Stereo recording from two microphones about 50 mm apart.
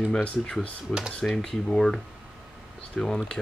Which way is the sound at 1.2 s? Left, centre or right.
Left.